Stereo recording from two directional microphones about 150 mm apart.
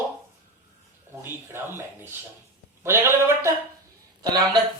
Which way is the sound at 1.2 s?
15° right (ahead or behind).